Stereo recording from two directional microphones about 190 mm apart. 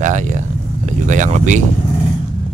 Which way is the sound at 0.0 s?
40° right (ahead or behind).